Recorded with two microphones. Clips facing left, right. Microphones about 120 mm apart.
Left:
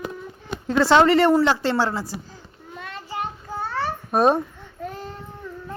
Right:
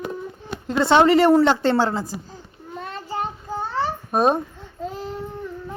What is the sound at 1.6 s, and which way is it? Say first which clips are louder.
Speech: right 3 dB; 45° right (ahead or behind).